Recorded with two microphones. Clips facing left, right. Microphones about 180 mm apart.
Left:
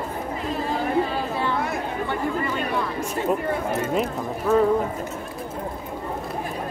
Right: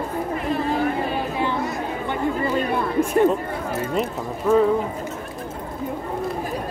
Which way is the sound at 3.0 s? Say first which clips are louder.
Right 10 dB; 55° right (ahead or behind).